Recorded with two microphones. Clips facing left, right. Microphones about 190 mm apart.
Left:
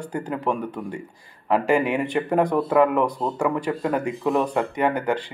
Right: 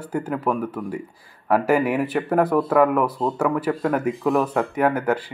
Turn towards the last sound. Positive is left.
turn(degrees=-5)  # may be behind; listen again after turning